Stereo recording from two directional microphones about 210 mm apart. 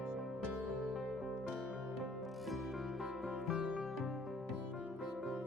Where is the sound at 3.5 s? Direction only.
Centre (ahead or behind).